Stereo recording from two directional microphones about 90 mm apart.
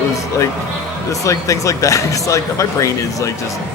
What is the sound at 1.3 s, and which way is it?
A man's voice, 35° left (ahead or behind).